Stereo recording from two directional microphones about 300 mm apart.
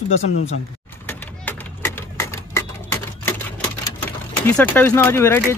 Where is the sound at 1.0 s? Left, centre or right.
Centre.